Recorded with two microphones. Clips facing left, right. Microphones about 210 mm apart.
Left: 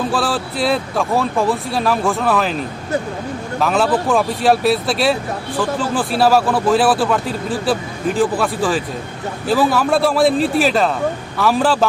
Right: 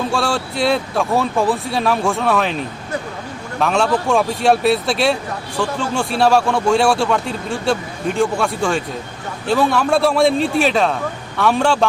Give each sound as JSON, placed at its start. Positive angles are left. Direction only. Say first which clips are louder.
{"t": 0.1, "sound": "speech", "louder": "even", "side_deg": 0}
{"t": 3.6, "sound": "speech", "louder": "even", "side_deg": 0}